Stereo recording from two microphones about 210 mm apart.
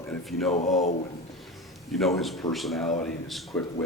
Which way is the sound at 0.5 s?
35° left (ahead or behind).